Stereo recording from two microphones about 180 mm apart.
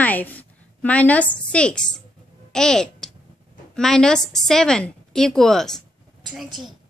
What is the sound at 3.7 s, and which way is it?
A woman's voice, 5° left (ahead or behind).